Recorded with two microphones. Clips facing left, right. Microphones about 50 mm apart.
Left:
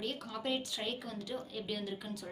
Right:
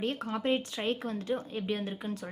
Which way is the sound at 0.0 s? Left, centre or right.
Right.